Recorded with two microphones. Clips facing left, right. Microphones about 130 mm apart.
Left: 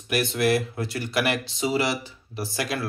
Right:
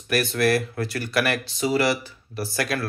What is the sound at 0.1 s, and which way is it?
Speech, 20° left (ahead or behind).